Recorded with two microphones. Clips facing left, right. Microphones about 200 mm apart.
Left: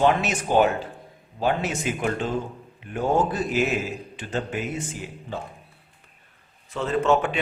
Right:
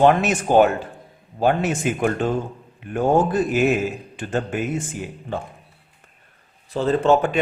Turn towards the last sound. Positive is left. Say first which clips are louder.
# right 4 dB
turn(degrees=-35)  # may be behind; listen again after turning